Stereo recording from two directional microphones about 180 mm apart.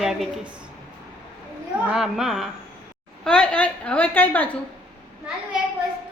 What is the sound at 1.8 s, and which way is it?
A woman's voice, 5° right (ahead or behind).